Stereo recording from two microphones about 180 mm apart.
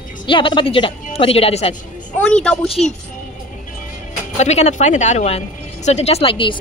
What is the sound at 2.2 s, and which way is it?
Speech, 5° left (ahead or behind).